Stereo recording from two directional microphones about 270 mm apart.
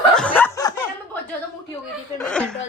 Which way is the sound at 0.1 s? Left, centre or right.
Centre.